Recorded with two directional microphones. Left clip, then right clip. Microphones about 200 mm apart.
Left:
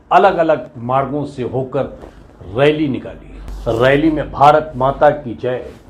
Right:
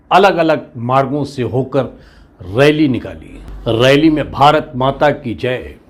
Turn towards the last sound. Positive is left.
turn(degrees=-55)  # may be behind; listen again after turning